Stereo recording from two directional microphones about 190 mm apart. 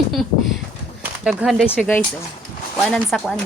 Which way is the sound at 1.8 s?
10° left (ahead or behind).